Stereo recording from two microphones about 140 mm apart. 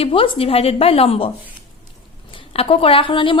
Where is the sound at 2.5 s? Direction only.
45° left (ahead or behind).